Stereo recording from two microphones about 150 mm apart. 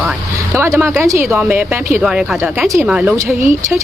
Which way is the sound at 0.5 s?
15° right (ahead or behind).